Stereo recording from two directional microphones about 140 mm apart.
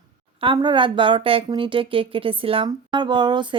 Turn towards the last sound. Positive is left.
turn(degrees=-35)  # may be behind; listen again after turning